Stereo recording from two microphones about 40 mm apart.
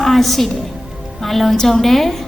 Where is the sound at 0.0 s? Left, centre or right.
Centre.